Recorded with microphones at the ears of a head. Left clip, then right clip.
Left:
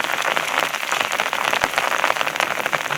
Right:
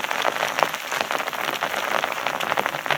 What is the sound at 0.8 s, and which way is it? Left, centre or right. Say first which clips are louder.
Rain on surface: left 4 dB; left.